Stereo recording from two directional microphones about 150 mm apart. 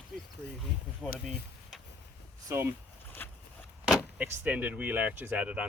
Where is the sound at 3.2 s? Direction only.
10° left (ahead or behind).